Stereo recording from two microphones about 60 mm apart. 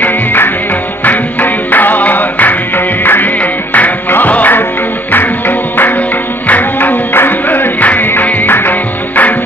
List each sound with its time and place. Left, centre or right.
0.0 s music: left